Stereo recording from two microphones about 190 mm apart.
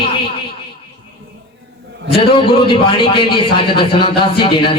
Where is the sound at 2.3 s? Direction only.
25° left (ahead or behind).